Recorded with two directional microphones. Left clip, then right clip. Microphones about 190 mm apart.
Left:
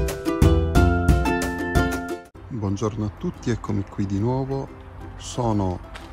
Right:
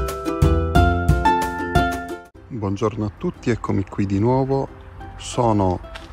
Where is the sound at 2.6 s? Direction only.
10° left (ahead or behind).